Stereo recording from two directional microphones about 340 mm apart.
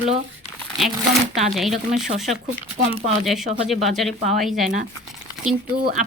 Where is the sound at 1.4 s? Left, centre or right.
Centre.